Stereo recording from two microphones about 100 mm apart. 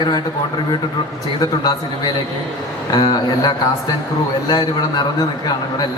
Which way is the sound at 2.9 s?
45° left (ahead or behind).